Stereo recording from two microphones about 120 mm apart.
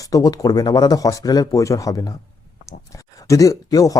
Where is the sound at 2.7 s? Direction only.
25° left (ahead or behind).